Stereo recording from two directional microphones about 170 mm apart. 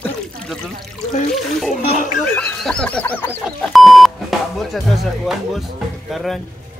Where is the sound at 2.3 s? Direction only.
5° left (ahead or behind).